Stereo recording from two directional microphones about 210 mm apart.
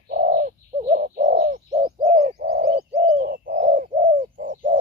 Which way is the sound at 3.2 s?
45° right (ahead or behind).